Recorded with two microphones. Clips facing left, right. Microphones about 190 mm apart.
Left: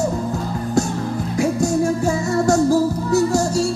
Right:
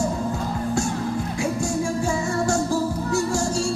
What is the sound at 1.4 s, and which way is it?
Music, 40° left (ahead or behind).